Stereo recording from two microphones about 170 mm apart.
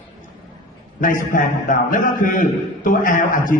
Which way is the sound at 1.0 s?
50° left (ahead or behind).